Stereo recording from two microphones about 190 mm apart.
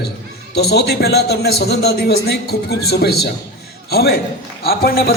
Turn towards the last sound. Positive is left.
turn(degrees=50)  # may be behind; listen again after turning